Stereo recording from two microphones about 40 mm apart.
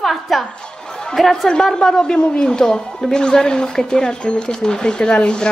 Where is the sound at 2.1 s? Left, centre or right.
Left.